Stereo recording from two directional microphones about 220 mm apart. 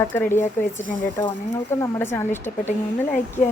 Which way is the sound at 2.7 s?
35° left (ahead or behind).